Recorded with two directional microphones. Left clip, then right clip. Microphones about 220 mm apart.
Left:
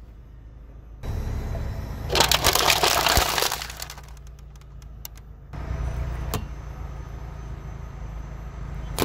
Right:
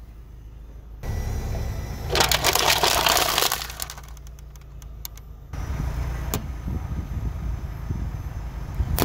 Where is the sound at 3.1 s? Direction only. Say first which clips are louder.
Right 1 dB; 15° right (ahead or behind).